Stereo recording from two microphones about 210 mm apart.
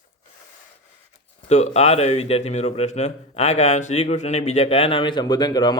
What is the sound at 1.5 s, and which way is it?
Speech, 30° left (ahead or behind).